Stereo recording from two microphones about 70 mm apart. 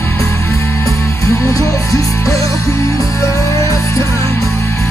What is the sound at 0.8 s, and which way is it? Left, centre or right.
Music, left.